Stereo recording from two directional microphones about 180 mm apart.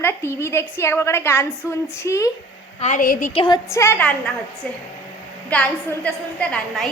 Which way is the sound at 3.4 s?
20° left (ahead or behind).